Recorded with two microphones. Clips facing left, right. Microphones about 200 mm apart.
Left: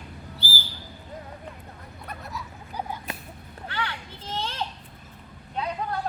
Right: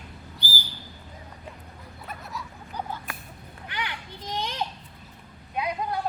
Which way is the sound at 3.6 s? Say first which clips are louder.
Left 2 dB; 15° right (ahead or behind).